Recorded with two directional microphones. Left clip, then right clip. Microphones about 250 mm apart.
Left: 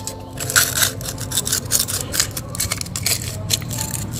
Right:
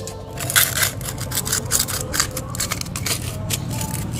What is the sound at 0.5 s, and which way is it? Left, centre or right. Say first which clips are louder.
Crushing: left 1 dB; centre.